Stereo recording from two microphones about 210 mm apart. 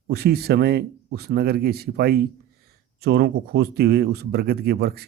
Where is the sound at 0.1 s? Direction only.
50° right (ahead or behind).